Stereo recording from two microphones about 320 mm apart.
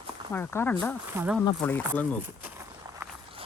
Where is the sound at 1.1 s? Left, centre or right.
Centre.